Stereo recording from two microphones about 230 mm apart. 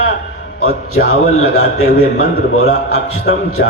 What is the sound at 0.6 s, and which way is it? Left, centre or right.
A man's voice, left.